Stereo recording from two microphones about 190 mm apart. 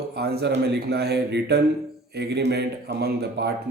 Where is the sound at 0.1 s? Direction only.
55° right (ahead or behind).